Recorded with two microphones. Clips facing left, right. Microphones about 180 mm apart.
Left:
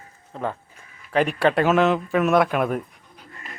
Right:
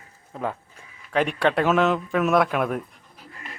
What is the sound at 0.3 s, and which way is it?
Speech, 5° right (ahead or behind).